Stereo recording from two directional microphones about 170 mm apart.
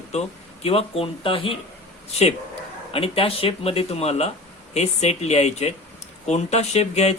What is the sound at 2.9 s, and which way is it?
Speech, 35° left (ahead or behind).